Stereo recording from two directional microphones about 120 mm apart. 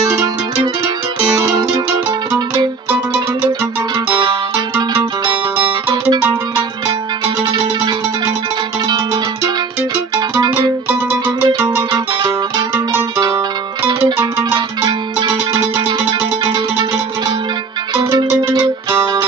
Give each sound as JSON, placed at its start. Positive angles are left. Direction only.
{"t": 8.8, "sound": "music", "side_deg": -40}
{"t": 10.9, "sound": "music", "side_deg": -15}
{"t": 11.9, "sound": "music", "side_deg": -40}
{"t": 14.5, "sound": "music", "side_deg": -40}